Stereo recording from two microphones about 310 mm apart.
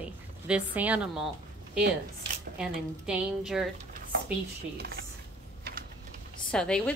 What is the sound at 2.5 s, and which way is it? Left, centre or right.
A woman's voice, centre.